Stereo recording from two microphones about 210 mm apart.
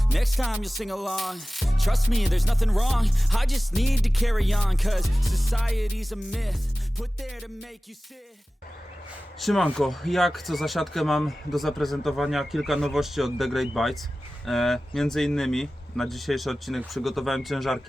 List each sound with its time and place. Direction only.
0.1 s music: centre (ahead or behind)
9.4 s music: centre (ahead or behind)